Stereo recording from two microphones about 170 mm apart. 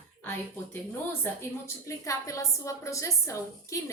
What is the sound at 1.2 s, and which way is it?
A woman's voice, 15° left (ahead or behind).